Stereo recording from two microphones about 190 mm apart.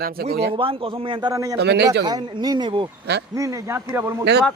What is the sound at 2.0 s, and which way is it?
A man's voice, 20° right (ahead or behind).